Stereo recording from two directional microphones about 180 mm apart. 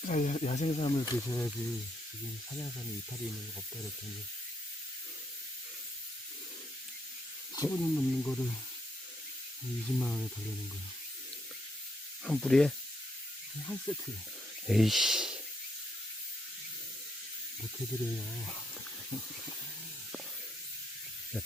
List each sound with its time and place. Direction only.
0.0 s speech: 40° left (ahead or behind)
1.2 s speech: 15° left (ahead or behind)
1.5 s speech: centre (ahead or behind)
7.5 s speech: 15° left (ahead or behind)
9.8 s speech: 5° left (ahead or behind)
12.2 s speech: centre (ahead or behind)